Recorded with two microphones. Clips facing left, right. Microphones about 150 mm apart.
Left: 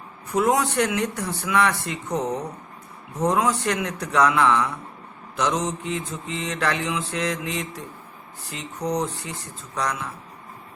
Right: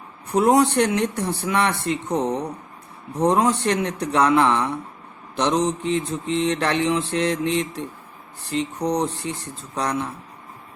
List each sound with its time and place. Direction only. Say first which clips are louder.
0.3 s speech: right 4 dB; 35° right (ahead or behind)
5.6 s mantra: right 5 dB; 10° left (ahead or behind)
6.5 s speech: right 1 dB; 30° right (ahead or behind)
8.8 s speech: even; 35° right (ahead or behind)